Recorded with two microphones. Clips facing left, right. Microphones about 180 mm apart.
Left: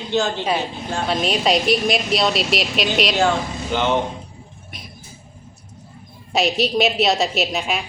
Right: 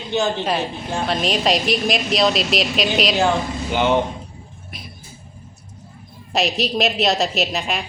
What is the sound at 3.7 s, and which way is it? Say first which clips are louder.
Speech: right 2 dB; 10° right (ahead or behind).